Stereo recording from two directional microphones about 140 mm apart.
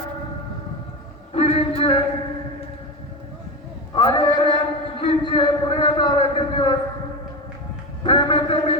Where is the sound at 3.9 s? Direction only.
35° left (ahead or behind).